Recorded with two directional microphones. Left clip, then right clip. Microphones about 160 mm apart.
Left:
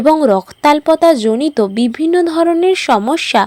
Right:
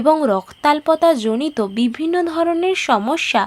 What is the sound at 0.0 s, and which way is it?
Speech, 30° left (ahead or behind).